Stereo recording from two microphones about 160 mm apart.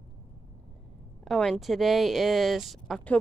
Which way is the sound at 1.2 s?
Centre (ahead or behind).